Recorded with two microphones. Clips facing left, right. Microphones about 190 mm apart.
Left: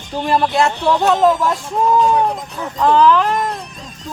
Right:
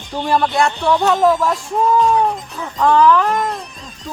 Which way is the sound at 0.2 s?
Centre (ahead or behind).